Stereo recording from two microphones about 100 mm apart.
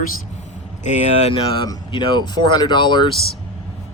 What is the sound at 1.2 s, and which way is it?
Speech, 60° left (ahead or behind).